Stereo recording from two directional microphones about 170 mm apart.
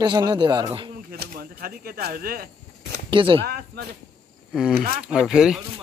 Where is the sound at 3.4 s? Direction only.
75° right (ahead or behind).